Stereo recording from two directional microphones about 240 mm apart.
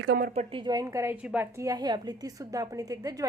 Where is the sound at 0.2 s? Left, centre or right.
Right.